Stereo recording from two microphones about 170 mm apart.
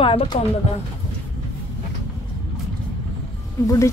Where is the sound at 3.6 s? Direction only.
20° left (ahead or behind).